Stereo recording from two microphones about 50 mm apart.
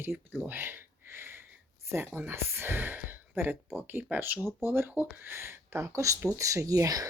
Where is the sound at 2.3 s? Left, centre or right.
Right.